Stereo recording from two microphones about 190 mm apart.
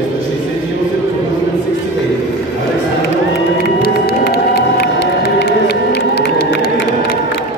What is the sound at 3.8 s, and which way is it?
Crowd, 55° left (ahead or behind).